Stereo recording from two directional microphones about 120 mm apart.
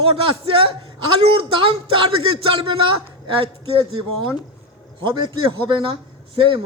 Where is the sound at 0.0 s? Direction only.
50° right (ahead or behind).